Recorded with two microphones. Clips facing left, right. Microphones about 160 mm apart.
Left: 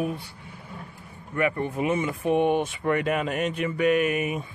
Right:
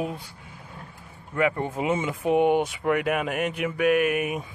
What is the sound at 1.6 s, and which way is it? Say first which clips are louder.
Speech: even; 20° right (ahead or behind).